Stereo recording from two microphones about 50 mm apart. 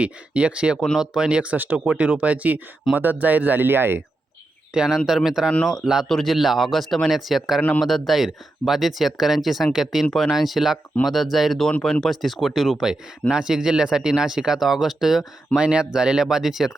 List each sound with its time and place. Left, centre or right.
0.0 s speech: right
1.5 s speech: right
4.7 s speech: centre
5.6 s speech: centre
15.5 s speech: centre